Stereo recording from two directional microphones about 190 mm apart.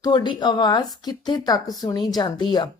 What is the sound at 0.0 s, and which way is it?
A woman's voice, 25° left (ahead or behind).